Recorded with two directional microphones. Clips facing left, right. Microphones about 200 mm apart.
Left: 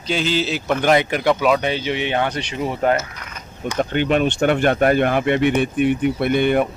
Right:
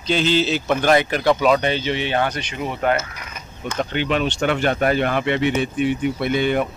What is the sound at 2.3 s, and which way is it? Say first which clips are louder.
Speech: left 3 dB; 30° left (ahead or behind).